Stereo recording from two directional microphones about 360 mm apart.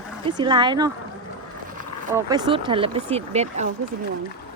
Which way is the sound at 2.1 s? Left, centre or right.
Centre.